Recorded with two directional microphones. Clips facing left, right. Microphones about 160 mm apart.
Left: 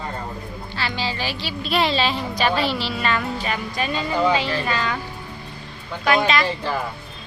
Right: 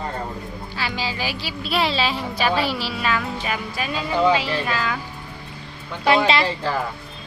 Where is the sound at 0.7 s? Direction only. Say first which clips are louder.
Left 1 dB; 10° right (ahead or behind).